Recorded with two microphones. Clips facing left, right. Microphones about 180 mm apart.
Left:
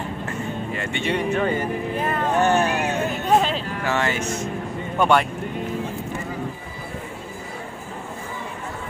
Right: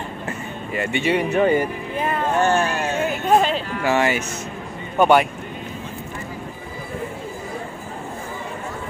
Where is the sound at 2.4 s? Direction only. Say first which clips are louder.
Left 1 dB; 20° left (ahead or behind).